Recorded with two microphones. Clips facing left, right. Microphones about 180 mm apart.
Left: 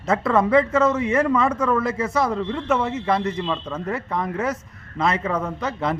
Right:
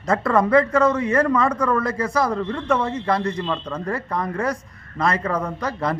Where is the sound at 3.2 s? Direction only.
20° left (ahead or behind).